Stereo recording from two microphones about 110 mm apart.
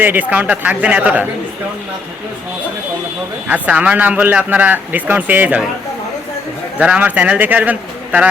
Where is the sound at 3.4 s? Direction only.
10° right (ahead or behind).